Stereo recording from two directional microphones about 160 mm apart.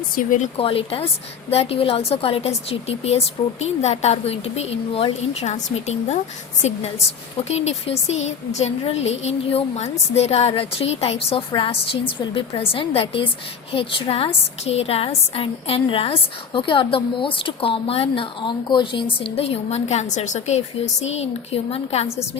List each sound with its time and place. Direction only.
0.2 s speech: 55° left (ahead or behind)
0.5 s a woman's voice: 35° left (ahead or behind)